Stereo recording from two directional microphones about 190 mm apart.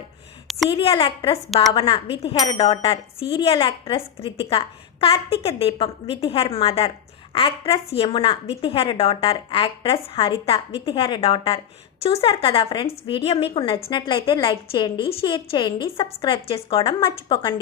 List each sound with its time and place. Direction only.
0.7 s speech: 30° left (ahead or behind)